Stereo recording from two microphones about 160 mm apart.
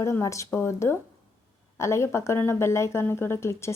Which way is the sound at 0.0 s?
20° left (ahead or behind).